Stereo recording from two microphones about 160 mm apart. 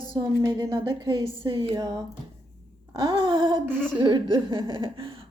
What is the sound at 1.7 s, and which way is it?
Speech, 20° right (ahead or behind).